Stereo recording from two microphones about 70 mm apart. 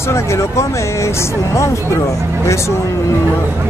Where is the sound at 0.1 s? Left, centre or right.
Left.